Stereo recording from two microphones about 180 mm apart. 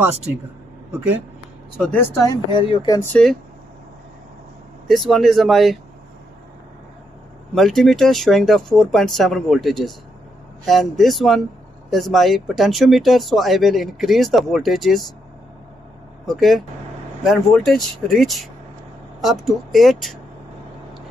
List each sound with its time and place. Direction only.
1.8 s speech: 10° left (ahead or behind)
2.6 s speech: 25° left (ahead or behind)
3.0 s speech: 5° left (ahead or behind)
4.8 s speech: centre (ahead or behind)
7.5 s speech: centre (ahead or behind)
16.3 s speech: centre (ahead or behind)